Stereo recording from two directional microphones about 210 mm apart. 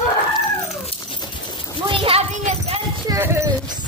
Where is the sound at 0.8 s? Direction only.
25° left (ahead or behind).